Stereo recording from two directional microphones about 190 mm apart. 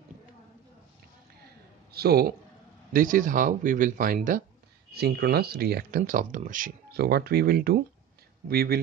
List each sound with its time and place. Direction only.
1.9 s a man's voice: 55° right (ahead or behind)